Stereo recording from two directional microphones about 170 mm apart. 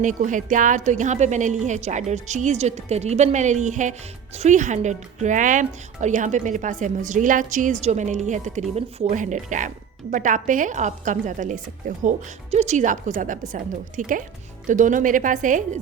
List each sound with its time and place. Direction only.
0.0 s speech: 50° right (ahead or behind)